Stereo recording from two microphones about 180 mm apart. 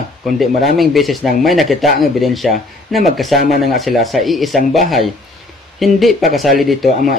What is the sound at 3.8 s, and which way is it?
Speech, centre (ahead or behind).